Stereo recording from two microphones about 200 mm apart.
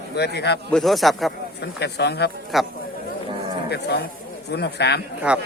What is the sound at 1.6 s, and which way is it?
Speech, 55° left (ahead or behind).